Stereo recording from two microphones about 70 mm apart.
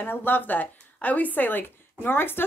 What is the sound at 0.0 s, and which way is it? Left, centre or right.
Speech, left.